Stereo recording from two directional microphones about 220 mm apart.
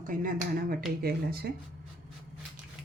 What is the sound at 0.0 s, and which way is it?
Speech, 40° right (ahead or behind).